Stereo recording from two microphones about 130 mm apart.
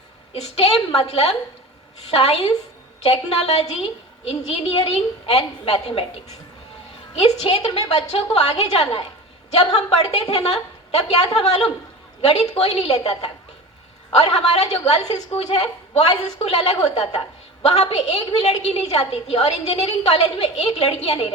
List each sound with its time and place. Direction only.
0.3 s a woman's voice: 50° left (ahead or behind)
7.2 s a woman's voice: 50° left (ahead or behind)
12.3 s a woman's voice: 55° left (ahead or behind)
14.1 s a woman's voice: 55° left (ahead or behind)